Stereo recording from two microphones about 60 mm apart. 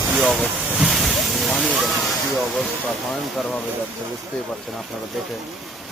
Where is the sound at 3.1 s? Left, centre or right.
Centre.